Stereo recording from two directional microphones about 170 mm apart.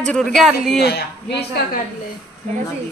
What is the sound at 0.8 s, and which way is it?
A woman's voice, 70° left (ahead or behind).